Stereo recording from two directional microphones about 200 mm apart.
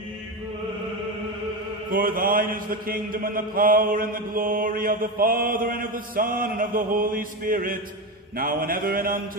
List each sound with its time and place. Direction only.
1.9 s mantra: 45° right (ahead or behind)